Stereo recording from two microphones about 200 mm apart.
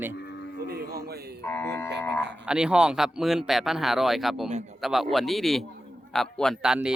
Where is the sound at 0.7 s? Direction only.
50° right (ahead or behind).